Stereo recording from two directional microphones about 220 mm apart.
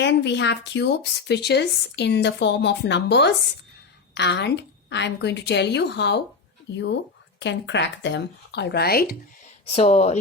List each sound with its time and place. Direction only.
0.0 s speech: 50° left (ahead or behind)
9.6 s speech: 30° left (ahead or behind)